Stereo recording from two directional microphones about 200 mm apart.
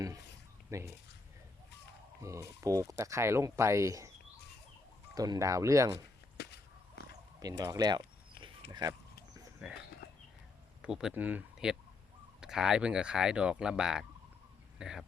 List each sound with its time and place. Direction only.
0.7 s speech: 15° right (ahead or behind)
2.2 s speech: 15° right (ahead or behind)
5.1 s speech: 20° right (ahead or behind)
6.3 s a sound: 55° left (ahead or behind)
7.3 s a sound: 15° right (ahead or behind)
8.7 s speech: 20° right (ahead or behind)
9.6 s speech: 5° right (ahead or behind)
10.8 s speech: 5° right (ahead or behind)